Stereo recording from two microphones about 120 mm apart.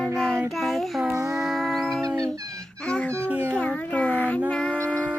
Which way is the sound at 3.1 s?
20° right (ahead or behind).